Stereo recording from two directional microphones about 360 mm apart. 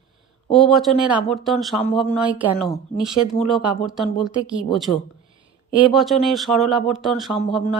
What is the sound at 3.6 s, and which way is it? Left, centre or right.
Speech, centre.